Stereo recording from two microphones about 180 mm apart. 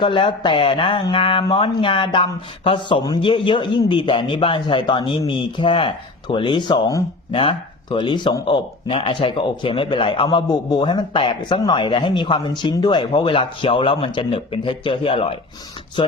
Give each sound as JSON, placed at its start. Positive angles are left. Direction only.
{"t": 0.0, "sound": "speech", "side_deg": 25}